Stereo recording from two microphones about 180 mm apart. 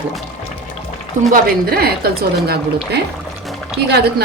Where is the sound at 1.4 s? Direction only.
60° right (ahead or behind).